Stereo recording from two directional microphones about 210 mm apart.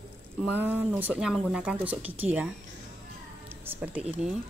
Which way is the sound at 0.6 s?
10° right (ahead or behind).